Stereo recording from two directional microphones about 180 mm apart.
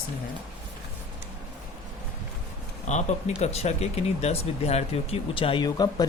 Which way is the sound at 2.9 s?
40° left (ahead or behind).